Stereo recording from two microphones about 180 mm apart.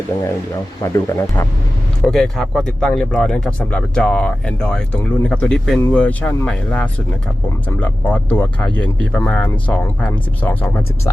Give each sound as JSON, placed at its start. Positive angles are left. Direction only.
{"t": 0.8, "sound": "speech", "side_deg": 15}
{"t": 2.0, "sound": "speech", "side_deg": 0}